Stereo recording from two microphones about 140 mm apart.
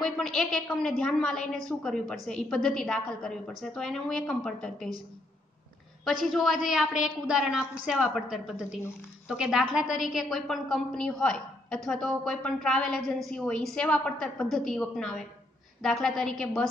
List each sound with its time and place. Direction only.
0.0 s a woman's voice: 5° left (ahead or behind)
6.0 s a woman's voice: centre (ahead or behind)